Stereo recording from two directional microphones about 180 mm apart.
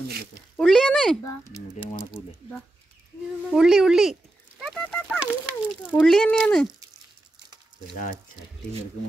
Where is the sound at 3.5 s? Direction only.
5° right (ahead or behind).